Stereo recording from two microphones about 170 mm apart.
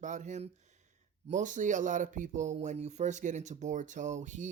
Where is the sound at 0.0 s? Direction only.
45° right (ahead or behind).